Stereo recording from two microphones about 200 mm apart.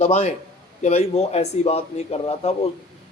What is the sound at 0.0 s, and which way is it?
Speech, 35° left (ahead or behind).